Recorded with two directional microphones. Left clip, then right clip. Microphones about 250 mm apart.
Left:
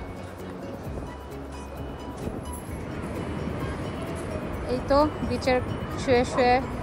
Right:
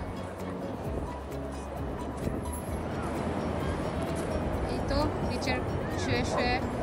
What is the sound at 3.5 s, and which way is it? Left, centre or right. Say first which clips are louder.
Music: right 1 dB; right.